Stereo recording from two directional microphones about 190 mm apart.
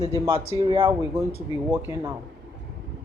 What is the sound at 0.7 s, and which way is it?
Speech, 30° right (ahead or behind).